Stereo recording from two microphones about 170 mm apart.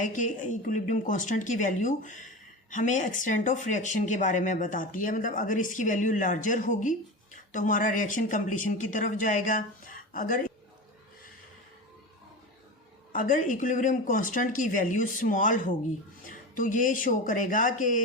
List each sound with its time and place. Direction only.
0.0 s a woman's voice: 50° left (ahead or behind)
13.1 s a woman's voice: 50° left (ahead or behind)